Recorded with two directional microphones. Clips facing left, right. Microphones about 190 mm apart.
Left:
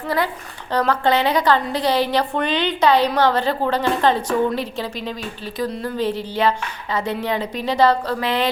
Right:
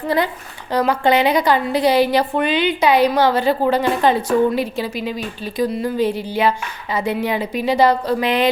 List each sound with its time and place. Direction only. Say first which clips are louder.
0.7 s a woman's voice: right 2 dB; 10° right (ahead or behind)